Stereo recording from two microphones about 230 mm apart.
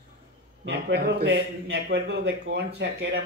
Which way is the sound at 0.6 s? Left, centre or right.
Right.